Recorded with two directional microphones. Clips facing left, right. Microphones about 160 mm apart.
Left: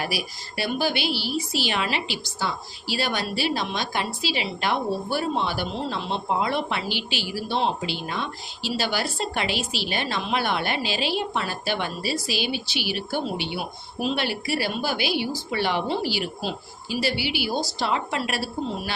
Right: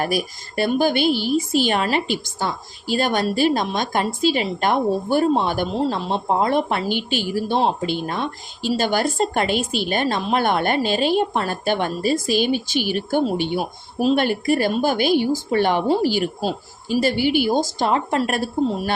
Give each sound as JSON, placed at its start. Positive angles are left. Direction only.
{"t": 0.0, "sound": "a woman's voice", "side_deg": -45}